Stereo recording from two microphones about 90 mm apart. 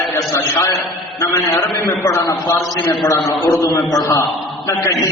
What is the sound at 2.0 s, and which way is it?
Speech, 35° left (ahead or behind).